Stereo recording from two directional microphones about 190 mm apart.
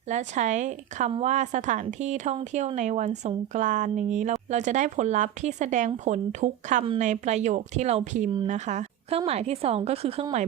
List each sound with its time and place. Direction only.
0.1 s a woman's voice: 40° right (ahead or behind)